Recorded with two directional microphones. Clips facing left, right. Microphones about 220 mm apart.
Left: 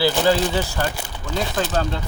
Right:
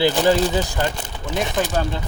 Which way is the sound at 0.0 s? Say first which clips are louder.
Right 1 dB; 20° right (ahead or behind).